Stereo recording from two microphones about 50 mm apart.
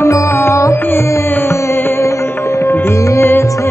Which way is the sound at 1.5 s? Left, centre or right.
Left.